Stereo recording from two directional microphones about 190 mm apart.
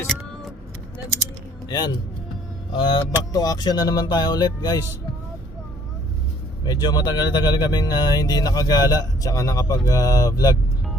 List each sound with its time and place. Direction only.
2.7 s speech: 25° left (ahead or behind)
6.7 s speech: 20° left (ahead or behind)